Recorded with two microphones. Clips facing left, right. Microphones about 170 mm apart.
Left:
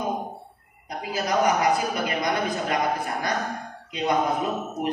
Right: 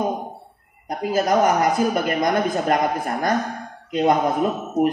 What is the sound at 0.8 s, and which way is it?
A woman's voice, 45° right (ahead or behind).